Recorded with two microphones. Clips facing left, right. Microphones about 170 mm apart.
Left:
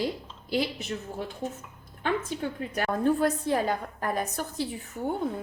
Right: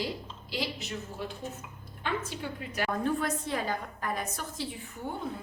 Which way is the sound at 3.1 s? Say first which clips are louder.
Left 6 dB; 40° left (ahead or behind).